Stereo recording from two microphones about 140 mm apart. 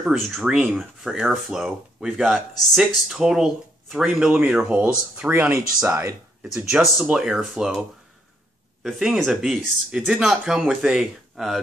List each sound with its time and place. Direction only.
0.0 s speech: 5° right (ahead or behind); by 6.1 s 20° right (ahead or behind)
6.4 s speech: 5° right (ahead or behind)
8.8 s speech: centre (ahead or behind)